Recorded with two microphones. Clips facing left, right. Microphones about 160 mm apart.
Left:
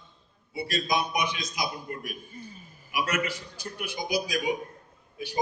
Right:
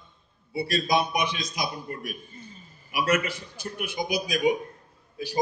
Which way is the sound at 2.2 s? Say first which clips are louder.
Left 2 dB; 10° left (ahead or behind).